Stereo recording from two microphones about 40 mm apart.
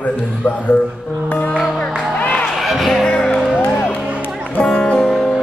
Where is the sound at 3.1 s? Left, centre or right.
Centre.